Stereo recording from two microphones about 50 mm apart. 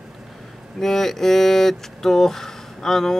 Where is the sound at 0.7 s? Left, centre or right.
Centre.